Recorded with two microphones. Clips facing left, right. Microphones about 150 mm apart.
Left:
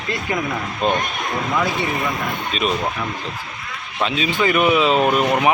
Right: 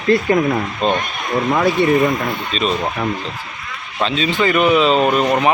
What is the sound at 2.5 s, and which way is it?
Speech, 10° left (ahead or behind).